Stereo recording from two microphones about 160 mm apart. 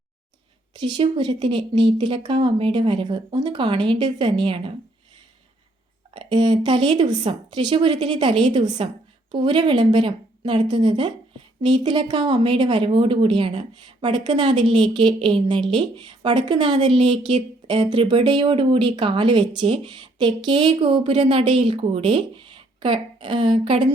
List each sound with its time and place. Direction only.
0.9 s speech: 30° right (ahead or behind)
6.1 s a sound: 30° right (ahead or behind)
6.6 s speech: 30° right (ahead or behind)